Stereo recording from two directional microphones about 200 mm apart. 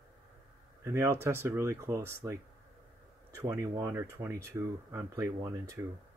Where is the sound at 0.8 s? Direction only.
15° right (ahead or behind).